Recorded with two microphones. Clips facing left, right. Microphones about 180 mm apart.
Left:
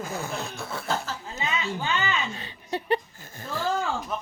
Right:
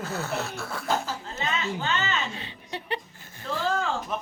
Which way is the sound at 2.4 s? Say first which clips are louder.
Left 5 dB; 45° left (ahead or behind).